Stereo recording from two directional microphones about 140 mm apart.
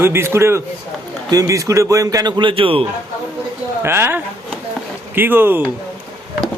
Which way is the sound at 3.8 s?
15° right (ahead or behind).